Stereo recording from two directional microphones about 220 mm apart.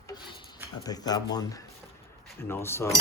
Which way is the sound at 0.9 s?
15° left (ahead or behind).